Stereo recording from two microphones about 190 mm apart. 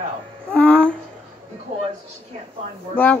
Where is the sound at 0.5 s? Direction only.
5° left (ahead or behind).